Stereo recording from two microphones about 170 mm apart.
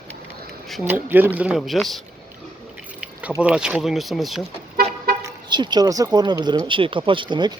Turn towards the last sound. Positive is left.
turn(degrees=-25)  # may be behind; listen again after turning